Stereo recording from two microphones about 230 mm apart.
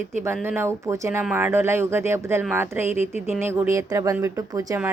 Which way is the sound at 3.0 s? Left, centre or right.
Left.